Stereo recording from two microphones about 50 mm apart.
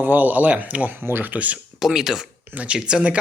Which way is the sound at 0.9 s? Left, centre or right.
Right.